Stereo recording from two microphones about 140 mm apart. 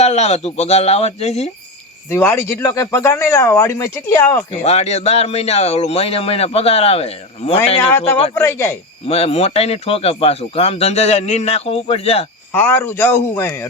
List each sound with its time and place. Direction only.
0.0 s speech: 50° left (ahead or behind)
2.0 s speech: 20° left (ahead or behind)
4.5 s speech: 50° left (ahead or behind)
7.8 s a man's voice: 15° left (ahead or behind)
9.0 s speech: 45° left (ahead or behind)
12.5 s a man's voice: 15° left (ahead or behind)